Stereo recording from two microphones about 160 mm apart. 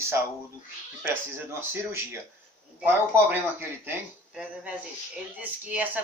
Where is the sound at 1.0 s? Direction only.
15° right (ahead or behind).